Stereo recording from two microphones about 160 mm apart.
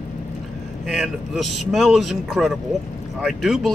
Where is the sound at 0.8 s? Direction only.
Centre (ahead or behind).